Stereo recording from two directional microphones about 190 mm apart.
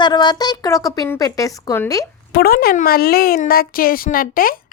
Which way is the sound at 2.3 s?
55° left (ahead or behind).